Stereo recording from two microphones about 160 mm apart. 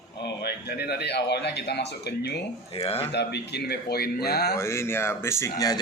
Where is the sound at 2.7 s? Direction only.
40° left (ahead or behind).